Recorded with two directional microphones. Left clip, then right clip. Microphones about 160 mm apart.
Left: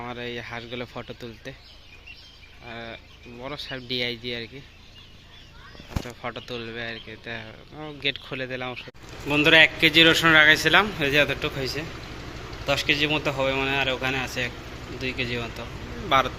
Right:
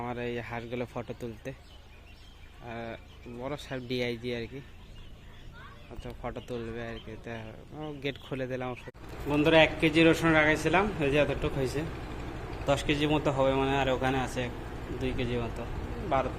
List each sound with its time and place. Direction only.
0.0 s speech: 10° right (ahead or behind)
2.6 s speech: 10° right (ahead or behind)
6.1 s speech: 5° right (ahead or behind)
11.6 s a man's voice: 25° right (ahead or behind)